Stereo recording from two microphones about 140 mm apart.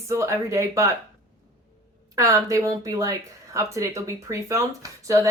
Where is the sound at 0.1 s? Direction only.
20° right (ahead or behind).